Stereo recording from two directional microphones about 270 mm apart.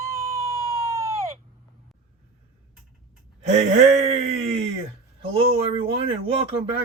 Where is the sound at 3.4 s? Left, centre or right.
Right.